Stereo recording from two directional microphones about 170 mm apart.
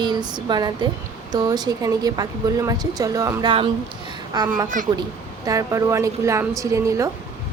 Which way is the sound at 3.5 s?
30° right (ahead or behind).